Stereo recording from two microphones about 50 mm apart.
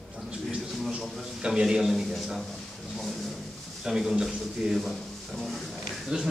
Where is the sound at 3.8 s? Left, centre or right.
Centre.